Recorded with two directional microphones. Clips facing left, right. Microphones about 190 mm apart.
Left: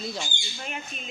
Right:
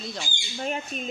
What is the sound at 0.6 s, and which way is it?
Speech, 35° right (ahead or behind).